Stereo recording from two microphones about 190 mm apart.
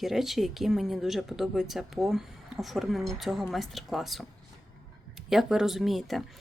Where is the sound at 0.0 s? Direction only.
Centre (ahead or behind).